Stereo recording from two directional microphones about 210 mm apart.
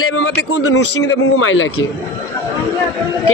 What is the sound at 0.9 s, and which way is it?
Speech, 60° left (ahead or behind).